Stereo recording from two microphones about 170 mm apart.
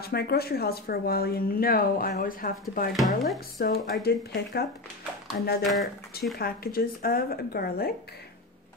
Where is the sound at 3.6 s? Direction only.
65° left (ahead or behind).